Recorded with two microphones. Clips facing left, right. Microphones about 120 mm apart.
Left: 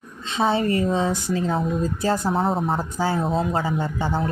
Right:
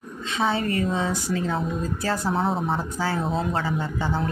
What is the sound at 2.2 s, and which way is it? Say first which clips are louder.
Speech: left 2 dB; centre (ahead or behind).